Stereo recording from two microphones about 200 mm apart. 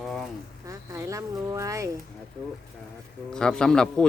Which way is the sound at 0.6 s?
15° right (ahead or behind).